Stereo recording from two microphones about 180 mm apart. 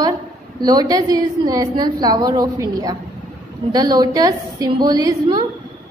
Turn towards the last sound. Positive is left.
turn(degrees=-20)  # may be behind; listen again after turning